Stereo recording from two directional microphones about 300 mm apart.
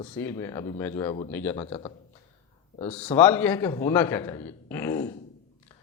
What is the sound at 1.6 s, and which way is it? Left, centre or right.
Speech, centre.